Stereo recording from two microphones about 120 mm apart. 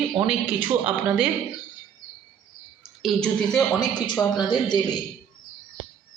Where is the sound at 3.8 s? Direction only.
35° left (ahead or behind).